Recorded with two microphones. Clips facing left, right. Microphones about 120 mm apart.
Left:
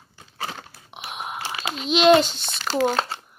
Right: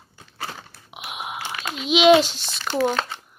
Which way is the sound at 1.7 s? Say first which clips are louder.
Right 1 dB; centre (ahead or behind).